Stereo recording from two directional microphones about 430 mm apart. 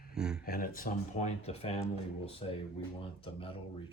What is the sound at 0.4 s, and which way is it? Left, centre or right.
Speech, centre.